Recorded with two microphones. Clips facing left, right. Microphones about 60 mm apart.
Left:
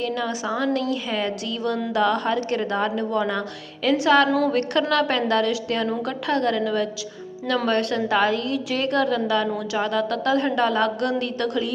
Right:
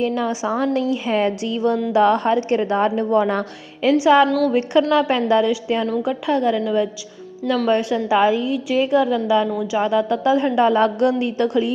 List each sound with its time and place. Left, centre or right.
0.0 s a woman's voice: right
3.8 s a woman's voice: centre
4.3 s a woman's voice: centre
4.5 s a woman's voice: centre
7.7 s a woman's voice: centre